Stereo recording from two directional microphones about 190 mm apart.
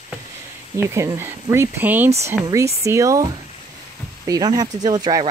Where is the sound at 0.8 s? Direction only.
15° right (ahead or behind).